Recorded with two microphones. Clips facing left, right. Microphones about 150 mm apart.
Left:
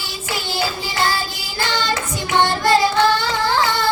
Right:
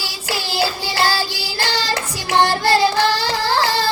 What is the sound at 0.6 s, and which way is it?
Music, 35° right (ahead or behind).